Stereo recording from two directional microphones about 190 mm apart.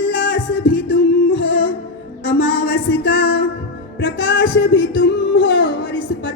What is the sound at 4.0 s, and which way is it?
Music, 70° left (ahead or behind).